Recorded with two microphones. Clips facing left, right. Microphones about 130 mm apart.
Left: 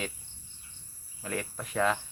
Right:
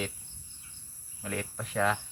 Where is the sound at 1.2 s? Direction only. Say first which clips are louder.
Left 1 dB; centre (ahead or behind).